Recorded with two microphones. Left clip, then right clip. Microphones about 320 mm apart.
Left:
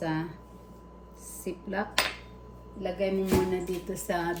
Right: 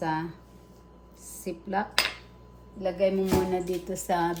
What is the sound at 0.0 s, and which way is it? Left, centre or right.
Speech, centre.